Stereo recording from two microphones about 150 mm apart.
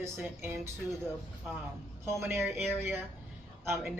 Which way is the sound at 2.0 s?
15° right (ahead or behind).